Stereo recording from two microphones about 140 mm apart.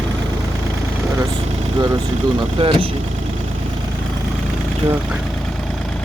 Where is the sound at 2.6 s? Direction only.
40° right (ahead or behind).